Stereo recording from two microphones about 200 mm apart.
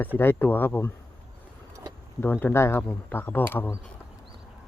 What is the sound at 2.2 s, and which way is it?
Speech, 10° left (ahead or behind).